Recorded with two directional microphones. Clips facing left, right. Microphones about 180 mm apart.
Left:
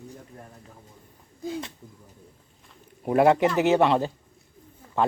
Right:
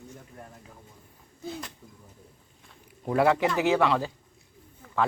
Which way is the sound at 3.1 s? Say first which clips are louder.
Left 4 dB; 20° left (ahead or behind).